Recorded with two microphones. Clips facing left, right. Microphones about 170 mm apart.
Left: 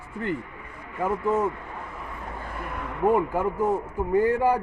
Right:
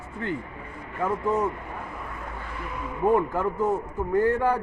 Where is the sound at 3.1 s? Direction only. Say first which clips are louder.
Even; 10° left (ahead or behind).